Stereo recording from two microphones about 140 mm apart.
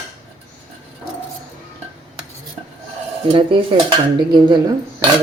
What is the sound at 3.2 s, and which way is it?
Speech, 35° right (ahead or behind).